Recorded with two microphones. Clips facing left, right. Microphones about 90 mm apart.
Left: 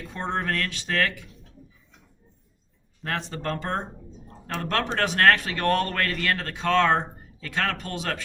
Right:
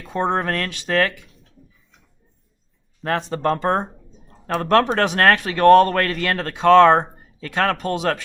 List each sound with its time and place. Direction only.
0.1 s speech: 60° right (ahead or behind)
3.2 s speech: 55° right (ahead or behind)
3.4 s speech: 45° right (ahead or behind)